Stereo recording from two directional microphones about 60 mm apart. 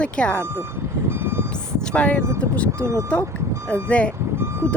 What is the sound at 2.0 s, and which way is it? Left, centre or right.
Speech, left.